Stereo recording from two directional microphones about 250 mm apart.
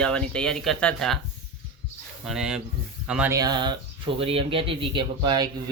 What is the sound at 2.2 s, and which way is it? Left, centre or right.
Speech, centre.